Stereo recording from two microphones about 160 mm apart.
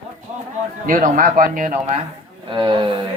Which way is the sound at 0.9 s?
60° right (ahead or behind).